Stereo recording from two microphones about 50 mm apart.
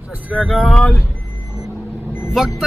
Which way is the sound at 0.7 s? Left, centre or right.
Left.